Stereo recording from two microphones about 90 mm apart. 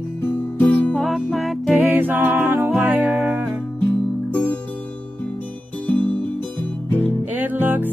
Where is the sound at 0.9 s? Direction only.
Centre (ahead or behind).